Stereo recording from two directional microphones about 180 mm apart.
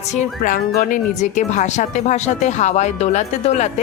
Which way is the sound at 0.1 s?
45° left (ahead or behind).